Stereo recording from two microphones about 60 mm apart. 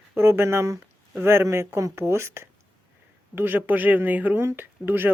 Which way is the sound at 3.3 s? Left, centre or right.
Right.